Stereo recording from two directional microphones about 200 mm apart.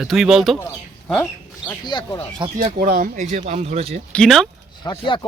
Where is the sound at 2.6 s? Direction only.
45° right (ahead or behind); by 4.0 s 30° right (ahead or behind).